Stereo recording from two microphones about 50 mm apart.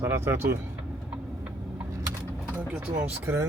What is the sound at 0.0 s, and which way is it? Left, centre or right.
Speech, right.